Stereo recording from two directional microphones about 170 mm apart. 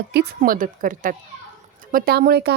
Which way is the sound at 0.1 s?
65° right (ahead or behind).